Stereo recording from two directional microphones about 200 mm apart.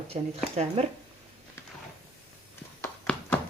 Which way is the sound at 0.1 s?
30° right (ahead or behind).